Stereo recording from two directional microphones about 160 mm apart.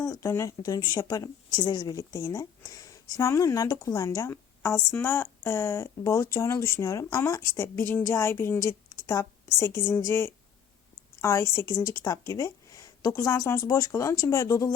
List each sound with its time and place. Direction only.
0.0 s a woman's voice: 20° left (ahead or behind)